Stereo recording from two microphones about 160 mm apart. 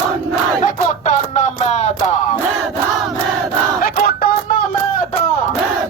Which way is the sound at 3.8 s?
70° left (ahead or behind).